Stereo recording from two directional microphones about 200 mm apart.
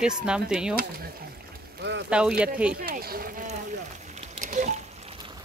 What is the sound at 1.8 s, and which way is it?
Speech, 60° right (ahead or behind).